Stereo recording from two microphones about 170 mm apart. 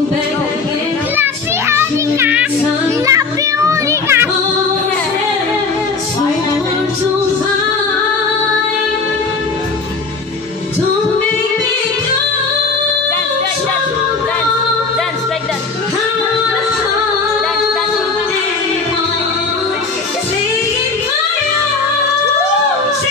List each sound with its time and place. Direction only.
1.1 s child singing: 15° right (ahead or behind)
3.1 s music: 20° right (ahead or behind)